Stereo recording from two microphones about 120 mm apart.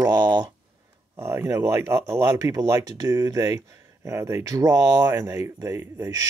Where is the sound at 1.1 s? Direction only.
20° right (ahead or behind).